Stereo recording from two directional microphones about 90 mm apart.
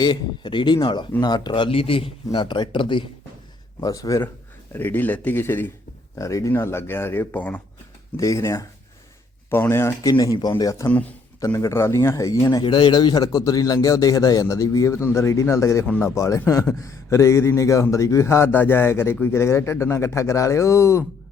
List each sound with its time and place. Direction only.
0.0 s a man's voice: 55° left (ahead or behind); by 2.1 s 90° left
2.3 s speech: 60° left (ahead or behind)
3.8 s a man's voice: 40° left (ahead or behind)
4.7 s speech: 20° left (ahead or behind)
6.1 s a man's voice: 35° left (ahead or behind); by 7.6 s 20° left (ahead or behind)
8.1 s a man's voice: 35° left (ahead or behind)
12.6 s a man's voice: 55° left (ahead or behind); by 15.9 s 35° left (ahead or behind)
15.9 s speech: 20° left (ahead or behind)
16.1 s a man's voice: 35° left (ahead or behind)